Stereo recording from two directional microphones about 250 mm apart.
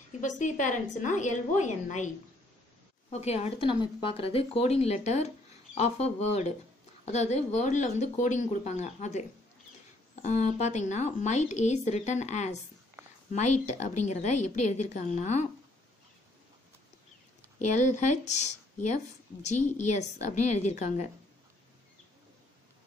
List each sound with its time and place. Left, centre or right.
0.2 s a woman's voice: left
10.2 s a woman's voice: left
17.6 s a woman's voice: left